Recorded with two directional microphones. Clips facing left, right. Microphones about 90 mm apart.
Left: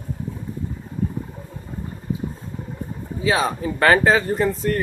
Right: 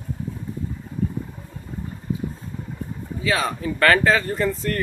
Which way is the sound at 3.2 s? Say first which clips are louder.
Left 3 dB; 20° left (ahead or behind).